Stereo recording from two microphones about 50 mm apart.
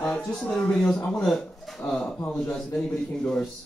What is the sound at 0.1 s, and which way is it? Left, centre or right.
Speech, centre.